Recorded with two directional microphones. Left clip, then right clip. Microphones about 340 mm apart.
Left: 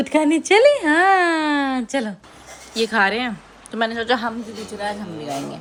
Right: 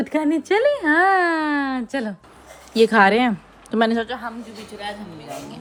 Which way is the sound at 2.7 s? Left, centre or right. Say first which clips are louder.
Right 4 dB; centre.